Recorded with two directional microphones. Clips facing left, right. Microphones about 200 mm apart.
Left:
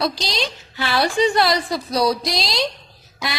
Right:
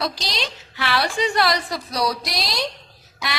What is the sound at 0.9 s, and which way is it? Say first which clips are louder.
A woman's voice: left 4 dB; 25° left (ahead or behind).